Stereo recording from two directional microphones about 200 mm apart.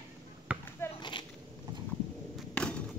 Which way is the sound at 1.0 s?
25° left (ahead or behind).